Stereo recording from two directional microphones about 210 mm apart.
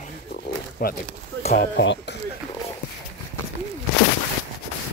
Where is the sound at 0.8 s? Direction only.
45° left (ahead or behind).